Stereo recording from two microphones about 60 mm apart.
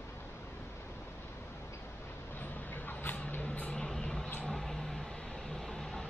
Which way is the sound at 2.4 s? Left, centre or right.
Left.